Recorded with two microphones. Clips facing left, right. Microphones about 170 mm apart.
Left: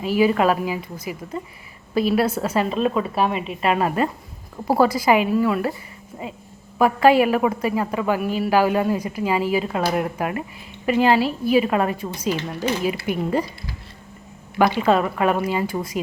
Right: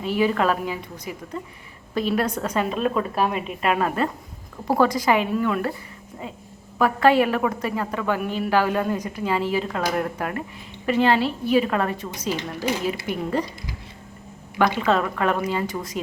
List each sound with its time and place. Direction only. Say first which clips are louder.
0.0 s a man's voice: left 3 dB; 10° left (ahead or behind)
3.8 s a man's voice: left 2 dB; 10° left (ahead or behind)
6.7 s a man's voice: left 2 dB; 10° left (ahead or behind)
12.4 s speech: left 2 dB; 10° right (ahead or behind)
13.1 s a man's voice: left 3 dB; 10° left (ahead or behind)
14.6 s a man's voice: left 3 dB; 10° left (ahead or behind)